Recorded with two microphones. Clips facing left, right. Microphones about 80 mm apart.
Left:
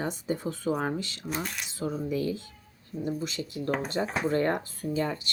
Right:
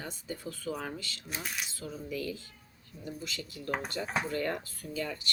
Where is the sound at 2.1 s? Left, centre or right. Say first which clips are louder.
Left 7 dB; left.